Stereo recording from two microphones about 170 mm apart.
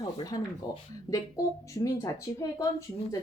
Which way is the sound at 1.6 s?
20° left (ahead or behind).